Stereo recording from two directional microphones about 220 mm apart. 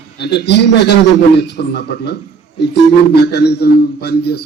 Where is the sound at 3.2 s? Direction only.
50° left (ahead or behind).